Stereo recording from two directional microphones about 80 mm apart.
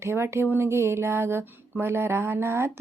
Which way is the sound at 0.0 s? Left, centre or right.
Right.